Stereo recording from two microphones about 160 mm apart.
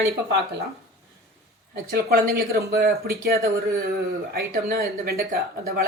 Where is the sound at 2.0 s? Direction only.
75° right (ahead or behind).